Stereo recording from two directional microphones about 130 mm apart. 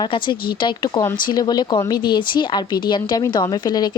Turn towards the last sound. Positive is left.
turn(degrees=35)  # may be behind; listen again after turning